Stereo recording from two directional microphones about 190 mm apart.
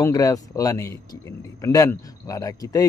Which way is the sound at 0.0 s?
20° left (ahead or behind).